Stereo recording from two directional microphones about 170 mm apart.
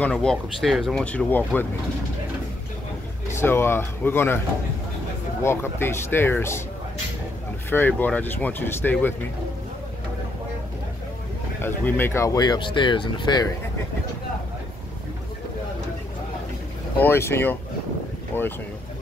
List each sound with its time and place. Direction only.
0.0 s speech: 5° left (ahead or behind)
3.3 s speech: 15° left (ahead or behind)
5.4 s speech: 15° left (ahead or behind)
7.7 s speech: 10° left (ahead or behind)
11.6 s speech: 15° left (ahead or behind)
17.0 s speech: 15° left (ahead or behind)